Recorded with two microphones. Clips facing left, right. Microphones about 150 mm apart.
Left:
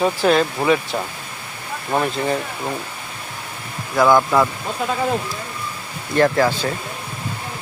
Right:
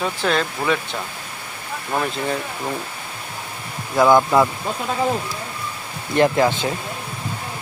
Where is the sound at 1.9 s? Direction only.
5° left (ahead or behind).